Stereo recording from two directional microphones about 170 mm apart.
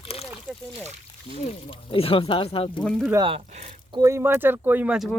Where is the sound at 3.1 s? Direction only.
30° right (ahead or behind).